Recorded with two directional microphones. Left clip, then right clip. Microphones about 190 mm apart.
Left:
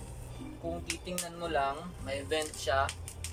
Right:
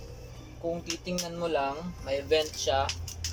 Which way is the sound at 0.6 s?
10° right (ahead or behind).